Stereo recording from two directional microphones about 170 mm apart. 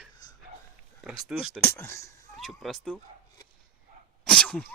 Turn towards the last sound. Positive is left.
turn(degrees=5)  # may be behind; listen again after turning